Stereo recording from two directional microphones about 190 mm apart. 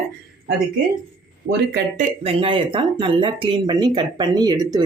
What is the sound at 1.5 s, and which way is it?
Speech, 55° right (ahead or behind).